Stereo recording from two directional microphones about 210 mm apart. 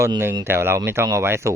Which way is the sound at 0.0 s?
10° right (ahead or behind).